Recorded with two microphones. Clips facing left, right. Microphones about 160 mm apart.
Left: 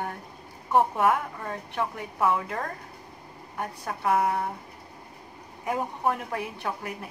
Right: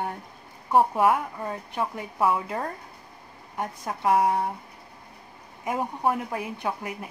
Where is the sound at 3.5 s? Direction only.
20° right (ahead or behind).